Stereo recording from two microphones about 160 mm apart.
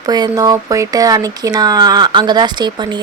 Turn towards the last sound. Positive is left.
turn(degrees=-25)  # may be behind; listen again after turning